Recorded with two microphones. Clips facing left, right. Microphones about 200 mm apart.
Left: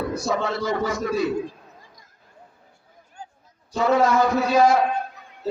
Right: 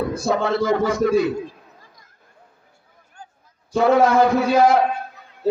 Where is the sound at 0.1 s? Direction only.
60° right (ahead or behind).